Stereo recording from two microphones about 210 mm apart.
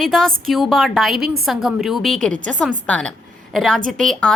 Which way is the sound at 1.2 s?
45° right (ahead or behind).